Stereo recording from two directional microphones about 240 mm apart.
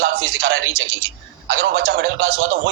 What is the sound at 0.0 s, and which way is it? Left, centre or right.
A man's voice, right.